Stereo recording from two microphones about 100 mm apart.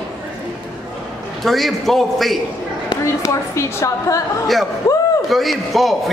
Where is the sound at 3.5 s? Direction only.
30° left (ahead or behind).